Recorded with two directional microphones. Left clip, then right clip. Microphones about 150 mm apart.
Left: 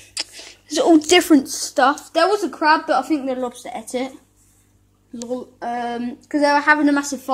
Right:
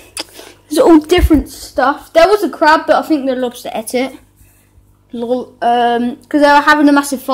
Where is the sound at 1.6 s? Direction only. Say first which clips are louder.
Right 3 dB; 20° left (ahead or behind).